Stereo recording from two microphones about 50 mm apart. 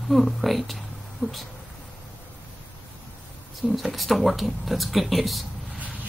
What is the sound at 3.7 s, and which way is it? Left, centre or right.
Speech, centre.